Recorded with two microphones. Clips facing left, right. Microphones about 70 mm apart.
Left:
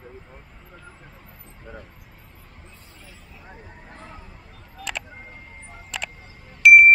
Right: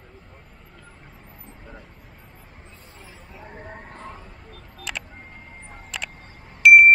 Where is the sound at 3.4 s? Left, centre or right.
Right.